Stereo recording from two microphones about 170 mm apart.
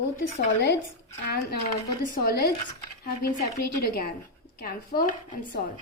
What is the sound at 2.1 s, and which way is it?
Speech, 65° left (ahead or behind).